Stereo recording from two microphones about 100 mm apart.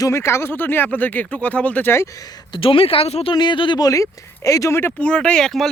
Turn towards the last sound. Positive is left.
turn(degrees=5)  # may be behind; listen again after turning